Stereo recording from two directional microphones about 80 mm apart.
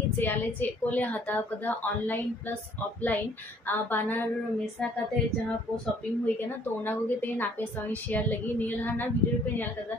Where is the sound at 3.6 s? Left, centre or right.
Left.